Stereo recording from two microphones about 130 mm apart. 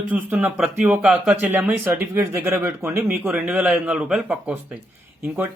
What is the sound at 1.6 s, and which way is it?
Speech, 15° right (ahead or behind).